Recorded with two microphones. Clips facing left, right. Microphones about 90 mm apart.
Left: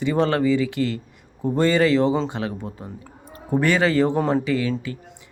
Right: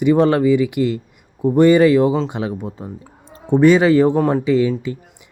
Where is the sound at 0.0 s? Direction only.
15° right (ahead or behind).